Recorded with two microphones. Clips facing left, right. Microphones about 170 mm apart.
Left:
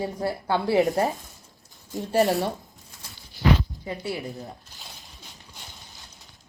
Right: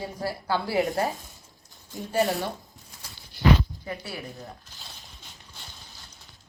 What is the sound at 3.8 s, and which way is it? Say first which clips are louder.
Speech: left 5 dB; 20° left (ahead or behind).